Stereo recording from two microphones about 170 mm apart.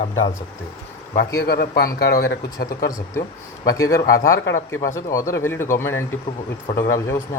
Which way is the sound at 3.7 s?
20° left (ahead or behind).